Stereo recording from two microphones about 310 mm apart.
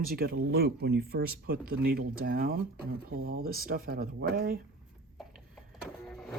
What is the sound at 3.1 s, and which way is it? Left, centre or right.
Speech, right.